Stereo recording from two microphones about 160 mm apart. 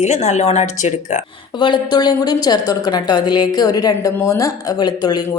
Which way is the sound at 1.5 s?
30° left (ahead or behind).